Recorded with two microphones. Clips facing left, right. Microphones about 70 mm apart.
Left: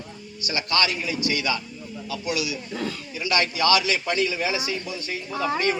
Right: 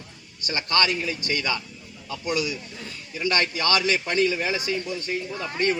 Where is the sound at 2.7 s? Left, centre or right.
Left.